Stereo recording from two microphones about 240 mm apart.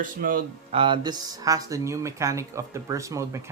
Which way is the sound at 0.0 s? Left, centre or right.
Right.